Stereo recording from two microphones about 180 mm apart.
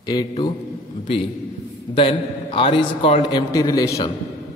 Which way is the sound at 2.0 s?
30° left (ahead or behind).